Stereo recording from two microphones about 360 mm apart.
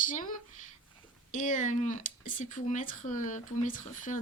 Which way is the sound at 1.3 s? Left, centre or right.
Left.